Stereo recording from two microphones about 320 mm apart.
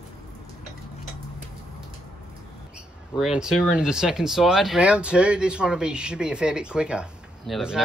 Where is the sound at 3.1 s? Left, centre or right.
Centre.